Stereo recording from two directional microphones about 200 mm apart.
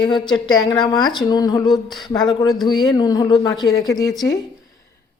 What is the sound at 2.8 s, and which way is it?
A woman's voice, 20° left (ahead or behind).